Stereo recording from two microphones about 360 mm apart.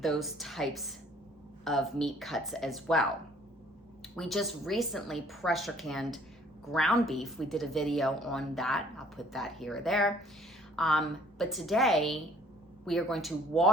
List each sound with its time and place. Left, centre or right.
0.0 s a woman's voice: centre
4.1 s a woman's voice: centre